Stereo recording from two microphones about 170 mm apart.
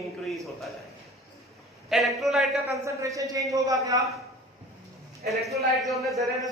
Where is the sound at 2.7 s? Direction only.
20° right (ahead or behind).